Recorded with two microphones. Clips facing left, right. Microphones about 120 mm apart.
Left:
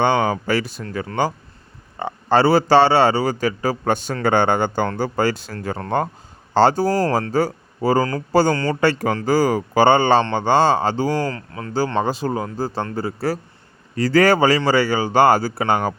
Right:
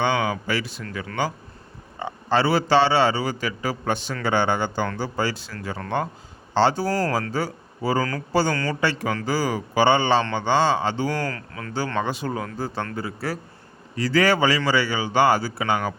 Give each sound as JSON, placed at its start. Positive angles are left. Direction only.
{"t": 0.0, "sound": "speech", "side_deg": 50}
{"t": 8.5, "sound": "speech", "side_deg": 30}
{"t": 8.8, "sound": "speech", "side_deg": 45}
{"t": 11.1, "sound": "speech", "side_deg": 25}